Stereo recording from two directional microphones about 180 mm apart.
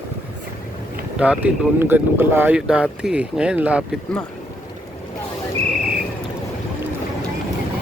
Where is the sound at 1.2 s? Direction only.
5° right (ahead or behind).